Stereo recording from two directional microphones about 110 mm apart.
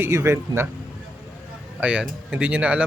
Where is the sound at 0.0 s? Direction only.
25° right (ahead or behind).